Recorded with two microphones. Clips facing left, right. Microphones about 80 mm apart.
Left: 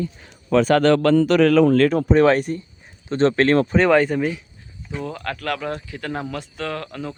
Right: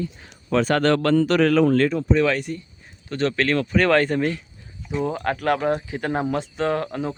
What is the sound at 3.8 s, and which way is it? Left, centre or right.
Speech, centre.